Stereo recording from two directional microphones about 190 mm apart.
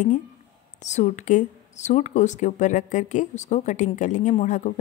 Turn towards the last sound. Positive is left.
turn(degrees=40)  # may be behind; listen again after turning